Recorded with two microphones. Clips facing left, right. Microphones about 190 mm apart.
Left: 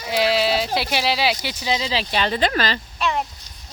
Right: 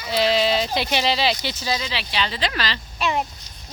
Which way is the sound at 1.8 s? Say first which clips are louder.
Left 4 dB; 40° left (ahead or behind).